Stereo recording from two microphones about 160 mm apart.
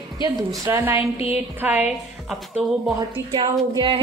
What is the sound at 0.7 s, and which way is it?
Speech, 15° right (ahead or behind).